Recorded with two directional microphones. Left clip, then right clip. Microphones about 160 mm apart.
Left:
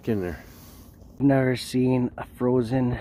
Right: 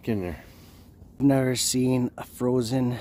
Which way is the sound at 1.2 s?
25° right (ahead or behind).